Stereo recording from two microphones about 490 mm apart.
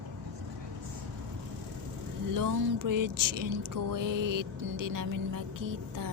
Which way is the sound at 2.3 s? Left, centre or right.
Right.